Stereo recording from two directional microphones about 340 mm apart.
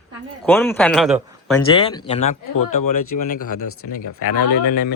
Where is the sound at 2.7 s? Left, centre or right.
Left.